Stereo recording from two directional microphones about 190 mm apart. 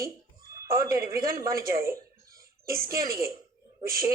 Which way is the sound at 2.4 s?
50° right (ahead or behind).